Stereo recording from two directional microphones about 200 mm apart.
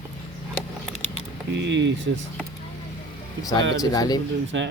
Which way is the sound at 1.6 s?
60° right (ahead or behind).